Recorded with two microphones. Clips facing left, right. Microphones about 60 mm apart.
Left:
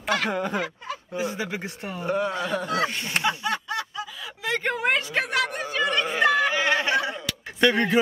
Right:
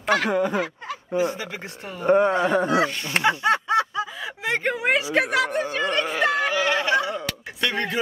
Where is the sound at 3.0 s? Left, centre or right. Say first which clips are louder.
Right 5 dB; right.